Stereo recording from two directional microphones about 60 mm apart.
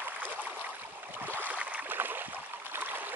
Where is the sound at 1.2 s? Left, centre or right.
Right.